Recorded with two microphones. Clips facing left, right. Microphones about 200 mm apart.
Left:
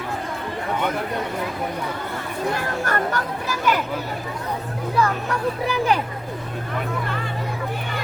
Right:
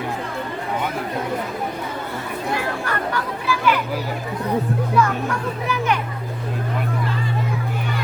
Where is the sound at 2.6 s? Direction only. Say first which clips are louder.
Left 1 dB; 45° left (ahead or behind).